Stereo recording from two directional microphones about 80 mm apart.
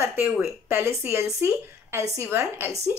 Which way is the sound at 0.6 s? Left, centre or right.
Right.